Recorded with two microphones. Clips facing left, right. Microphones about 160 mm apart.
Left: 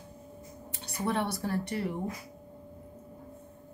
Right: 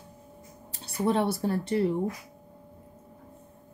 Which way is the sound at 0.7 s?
30° right (ahead or behind).